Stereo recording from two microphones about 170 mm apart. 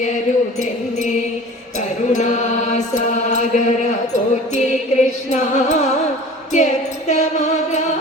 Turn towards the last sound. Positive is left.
turn(degrees=45)  # may be behind; listen again after turning